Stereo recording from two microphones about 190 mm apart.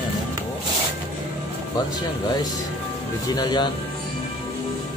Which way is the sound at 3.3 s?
25° left (ahead or behind).